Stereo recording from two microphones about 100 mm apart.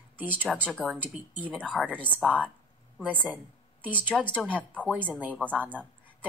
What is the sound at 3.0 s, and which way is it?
Speech, 15° right (ahead or behind).